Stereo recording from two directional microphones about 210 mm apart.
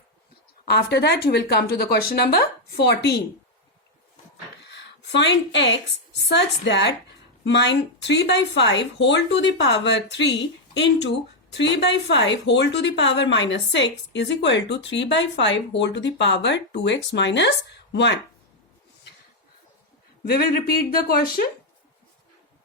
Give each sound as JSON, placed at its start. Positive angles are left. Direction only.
{"t": 0.7, "sound": "a woman's voice", "side_deg": 50}
{"t": 4.7, "sound": "a woman's voice", "side_deg": 55}
{"t": 20.2, "sound": "a woman's voice", "side_deg": 45}